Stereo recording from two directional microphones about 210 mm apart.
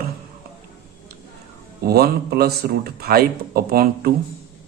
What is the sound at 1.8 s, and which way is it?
A man's voice, 50° right (ahead or behind).